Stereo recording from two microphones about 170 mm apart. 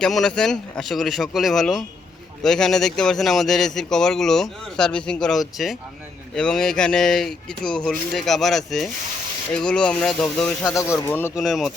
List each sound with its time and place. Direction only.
0.0 s speech: 5° left (ahead or behind)
10.7 s speech: 15° left (ahead or behind)
11.3 s speech: centre (ahead or behind)